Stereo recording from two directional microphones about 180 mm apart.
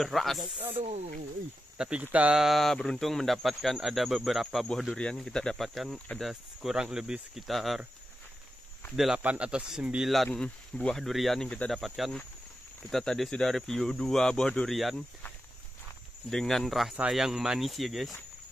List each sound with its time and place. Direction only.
0.0 s speech: centre (ahead or behind)
0.7 s speech: 35° right (ahead or behind)
1.8 s speech: 5° right (ahead or behind)
8.9 s speech: 5° right (ahead or behind)